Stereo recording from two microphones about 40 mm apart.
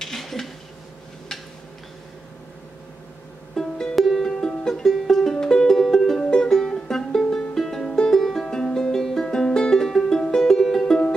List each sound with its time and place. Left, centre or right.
0.0 s a sound: centre
3.6 s music: centre
3.9 s music: centre
7.9 s music: centre
8.2 s music: centre
8.5 s music: centre